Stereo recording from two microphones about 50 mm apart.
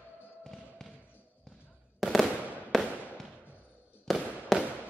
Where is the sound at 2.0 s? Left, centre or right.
Centre.